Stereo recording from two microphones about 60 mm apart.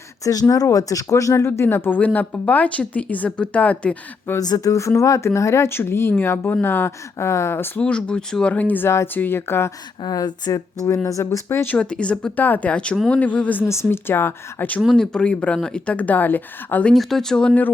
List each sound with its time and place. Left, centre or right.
0.3 s speech: left
1.5 s speech: left
2.0 s speech: left
4.4 s speech: left
7.8 s speech: centre
8.5 s speech: left
10.1 s speech: left
11.2 s speech: left
11.8 s speech: centre
13.7 s speech: left
14.1 s speech: left
14.9 s speech: centre; by 16.8 s left
16.9 s speech: centre